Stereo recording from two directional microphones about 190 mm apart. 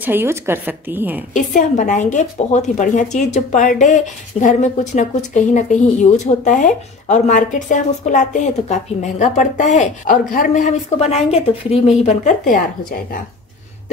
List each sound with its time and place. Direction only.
0.0 s a woman's voice: 10° right (ahead or behind)
1.3 s a woman's voice: 40° left (ahead or behind)